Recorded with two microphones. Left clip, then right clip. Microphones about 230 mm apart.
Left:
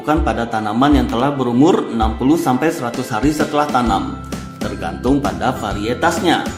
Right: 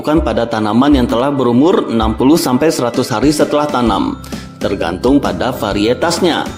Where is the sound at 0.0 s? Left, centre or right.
Right.